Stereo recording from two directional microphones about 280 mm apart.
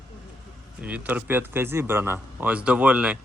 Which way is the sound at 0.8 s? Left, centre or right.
Centre.